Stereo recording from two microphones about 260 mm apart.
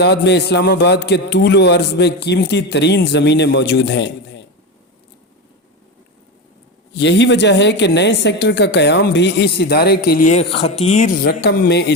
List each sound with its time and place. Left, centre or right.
0.0 s speech: left
6.9 s speech: left